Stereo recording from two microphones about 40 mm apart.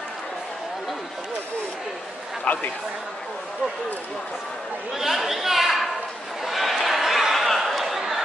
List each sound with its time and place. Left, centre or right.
2.4 s a man's voice: left
4.9 s speech: centre
6.4 s a sound: centre